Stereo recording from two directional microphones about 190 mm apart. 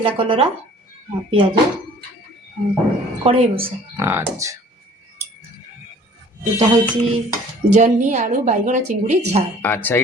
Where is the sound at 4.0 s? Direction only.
15° right (ahead or behind).